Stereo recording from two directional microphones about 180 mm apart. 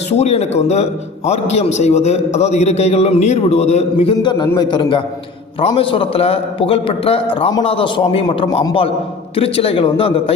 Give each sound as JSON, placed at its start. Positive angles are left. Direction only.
{"t": 0.1, "sound": "a man's voice", "side_deg": 35}